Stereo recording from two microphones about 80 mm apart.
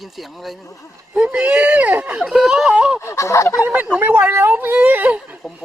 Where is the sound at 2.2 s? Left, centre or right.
Centre.